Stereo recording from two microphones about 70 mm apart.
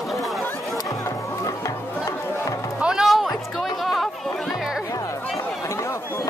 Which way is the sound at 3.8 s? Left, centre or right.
Centre.